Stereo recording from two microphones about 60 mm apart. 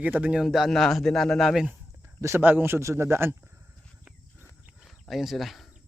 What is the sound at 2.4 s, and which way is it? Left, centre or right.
Speech, right.